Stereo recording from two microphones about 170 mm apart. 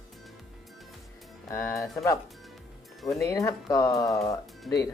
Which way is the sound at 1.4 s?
15° left (ahead or behind).